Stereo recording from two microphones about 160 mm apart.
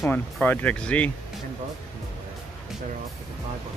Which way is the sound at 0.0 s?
10° left (ahead or behind).